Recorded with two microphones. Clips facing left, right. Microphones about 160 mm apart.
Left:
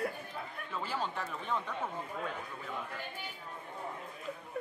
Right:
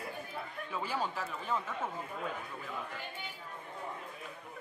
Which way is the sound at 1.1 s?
Centre (ahead or behind).